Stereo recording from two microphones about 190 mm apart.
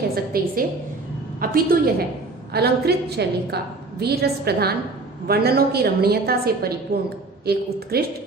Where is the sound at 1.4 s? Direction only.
50° right (ahead or behind).